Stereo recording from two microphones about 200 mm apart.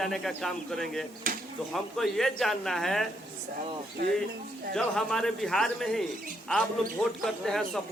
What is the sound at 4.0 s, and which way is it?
Speech, 55° right (ahead or behind).